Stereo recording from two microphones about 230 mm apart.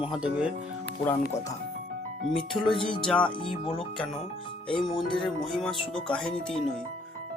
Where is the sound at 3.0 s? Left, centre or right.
Centre.